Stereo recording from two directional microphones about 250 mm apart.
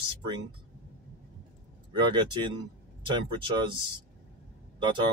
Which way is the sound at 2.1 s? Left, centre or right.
Centre.